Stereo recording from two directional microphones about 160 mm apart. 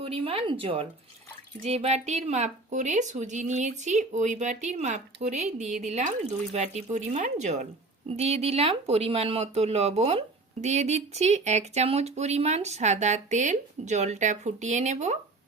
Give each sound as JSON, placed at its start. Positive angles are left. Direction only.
{"t": 0.0, "sound": "speech", "side_deg": -35}